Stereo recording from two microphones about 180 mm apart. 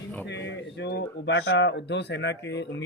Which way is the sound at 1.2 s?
75° left (ahead or behind).